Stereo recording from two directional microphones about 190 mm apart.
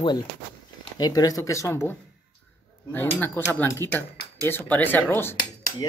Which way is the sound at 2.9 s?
10° left (ahead or behind).